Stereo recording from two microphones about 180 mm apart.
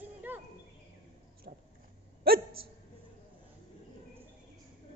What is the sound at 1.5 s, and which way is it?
Dog, 45° right (ahead or behind).